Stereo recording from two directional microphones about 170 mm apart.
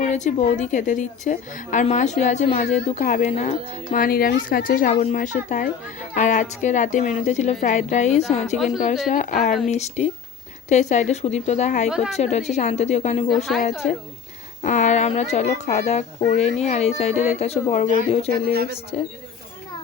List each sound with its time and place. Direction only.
0.0 s a woman's voice: 45° left (ahead or behind); by 4.4 s 75° left (ahead or behind)
4.4 s a woman's voice: 55° left (ahead or behind)
8.5 s a woman's voice: centre (ahead or behind)
9.0 s a woman's voice: 45° left (ahead or behind)
9.5 s a woman's voice: centre (ahead or behind)
9.7 s a child's voice: 40° left (ahead or behind)
11.9 s a woman's voice: 5° right (ahead or behind)
12.1 s a child's voice: 40° left (ahead or behind)
13.3 s a woman's voice: centre (ahead or behind)
14.6 s a child's voice: 45° left (ahead or behind)
18.9 s a child's voice: 40° left (ahead or behind)